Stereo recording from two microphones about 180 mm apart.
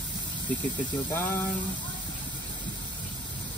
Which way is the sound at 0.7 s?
25° left (ahead or behind).